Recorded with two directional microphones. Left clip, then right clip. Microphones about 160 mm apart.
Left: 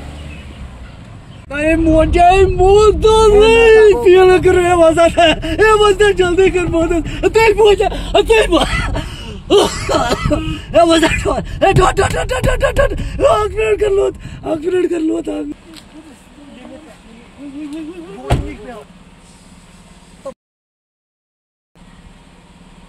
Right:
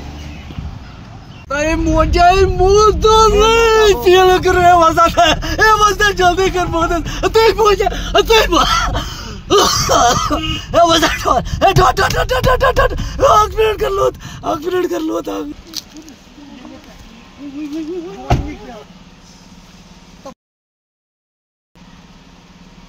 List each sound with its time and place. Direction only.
1.5 s speech: 15° right (ahead or behind)
7.6 s speech: 5° right (ahead or behind)
8.6 s a sound: 25° right (ahead or behind); by 9.7 s 5° right (ahead or behind)
9.7 s speech: 20° right (ahead or behind)
15.8 s speech: 90° right